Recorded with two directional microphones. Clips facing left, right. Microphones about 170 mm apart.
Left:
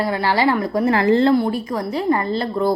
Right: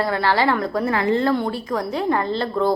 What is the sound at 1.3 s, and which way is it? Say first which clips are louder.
A woman's voice: left 4 dB; 10° left (ahead or behind).